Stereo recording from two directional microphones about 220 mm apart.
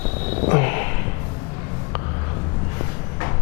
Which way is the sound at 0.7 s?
15° left (ahead or behind).